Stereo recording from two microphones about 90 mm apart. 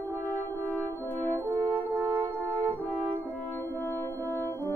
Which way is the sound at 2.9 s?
20° left (ahead or behind).